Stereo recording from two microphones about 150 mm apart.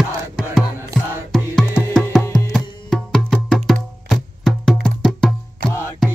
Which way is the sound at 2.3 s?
Centre (ahead or behind).